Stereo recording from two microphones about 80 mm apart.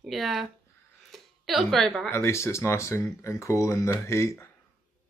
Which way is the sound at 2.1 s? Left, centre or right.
Left.